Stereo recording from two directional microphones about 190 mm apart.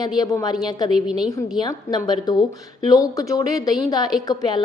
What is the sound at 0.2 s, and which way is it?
Speech, 20° left (ahead or behind).